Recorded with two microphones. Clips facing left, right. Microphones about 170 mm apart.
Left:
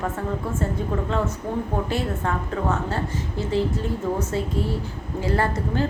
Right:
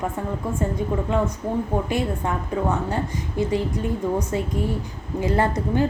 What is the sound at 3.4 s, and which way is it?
A woman's voice, 15° right (ahead or behind).